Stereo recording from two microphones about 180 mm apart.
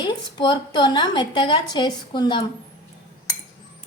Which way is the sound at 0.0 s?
25° left (ahead or behind).